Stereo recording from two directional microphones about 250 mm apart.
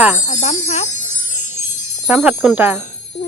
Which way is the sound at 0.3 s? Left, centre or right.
Left.